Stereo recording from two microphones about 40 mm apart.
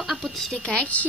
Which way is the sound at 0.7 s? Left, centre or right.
Left.